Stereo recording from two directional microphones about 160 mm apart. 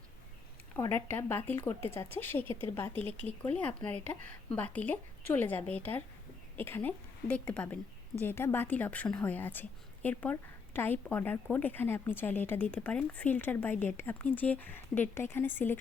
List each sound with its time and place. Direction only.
0.8 s speech: 15° left (ahead or behind)